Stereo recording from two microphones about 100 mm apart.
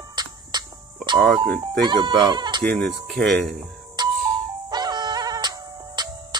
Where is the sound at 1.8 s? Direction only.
50° right (ahead or behind).